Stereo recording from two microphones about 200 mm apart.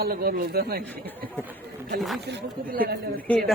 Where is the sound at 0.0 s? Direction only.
50° right (ahead or behind).